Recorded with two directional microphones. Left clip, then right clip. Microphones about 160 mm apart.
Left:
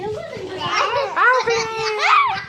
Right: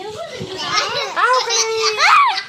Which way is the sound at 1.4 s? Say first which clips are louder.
Right 3 dB; 60° left (ahead or behind).